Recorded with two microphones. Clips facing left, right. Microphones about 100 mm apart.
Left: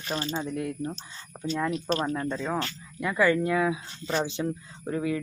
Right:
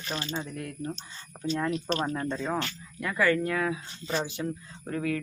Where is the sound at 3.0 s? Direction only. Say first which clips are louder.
Left 2 dB; 15° left (ahead or behind).